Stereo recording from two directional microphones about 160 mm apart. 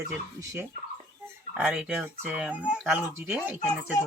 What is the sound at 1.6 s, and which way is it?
Speech, 5° right (ahead or behind).